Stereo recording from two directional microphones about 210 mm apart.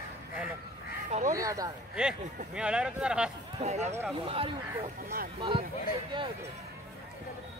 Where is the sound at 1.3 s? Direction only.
15° right (ahead or behind).